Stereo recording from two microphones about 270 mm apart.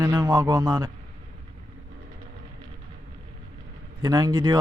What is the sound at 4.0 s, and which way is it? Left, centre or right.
Speech, centre.